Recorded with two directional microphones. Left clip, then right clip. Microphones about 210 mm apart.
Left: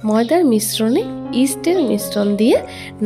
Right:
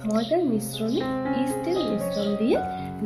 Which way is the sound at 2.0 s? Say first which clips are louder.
Left 8 dB; 55° left (ahead or behind).